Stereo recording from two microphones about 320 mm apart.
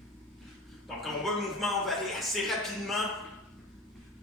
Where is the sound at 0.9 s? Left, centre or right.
Centre.